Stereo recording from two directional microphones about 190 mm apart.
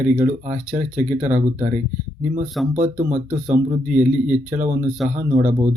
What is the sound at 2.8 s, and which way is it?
Speech, 40° right (ahead or behind).